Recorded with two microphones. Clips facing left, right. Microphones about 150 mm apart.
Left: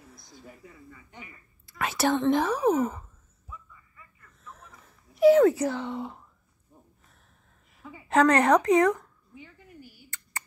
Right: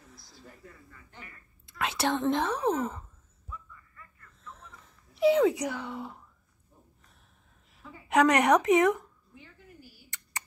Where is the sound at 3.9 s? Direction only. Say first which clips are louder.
Right 1 dB; 10° left (ahead or behind).